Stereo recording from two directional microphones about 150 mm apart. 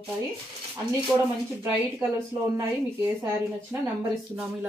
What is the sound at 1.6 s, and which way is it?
Speech, 15° right (ahead or behind).